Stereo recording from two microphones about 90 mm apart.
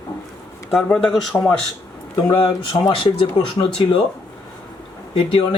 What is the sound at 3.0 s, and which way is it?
Speech, 65° left (ahead or behind).